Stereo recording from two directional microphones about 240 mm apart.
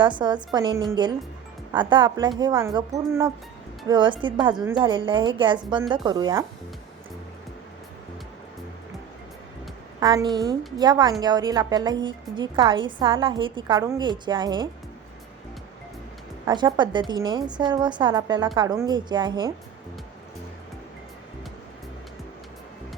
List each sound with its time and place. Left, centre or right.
0.0 s a woman's voice: centre
10.0 s a woman's voice: centre
16.5 s a woman's voice: centre